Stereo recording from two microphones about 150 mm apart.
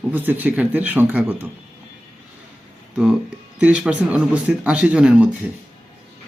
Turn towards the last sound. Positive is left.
turn(degrees=-5)  # may be behind; listen again after turning